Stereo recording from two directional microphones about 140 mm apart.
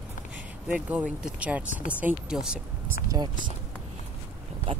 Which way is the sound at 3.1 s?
30° right (ahead or behind).